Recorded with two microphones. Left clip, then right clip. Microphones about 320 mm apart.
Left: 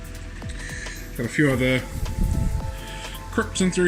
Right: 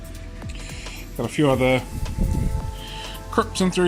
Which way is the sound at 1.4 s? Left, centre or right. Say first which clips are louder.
Right 2 dB; right.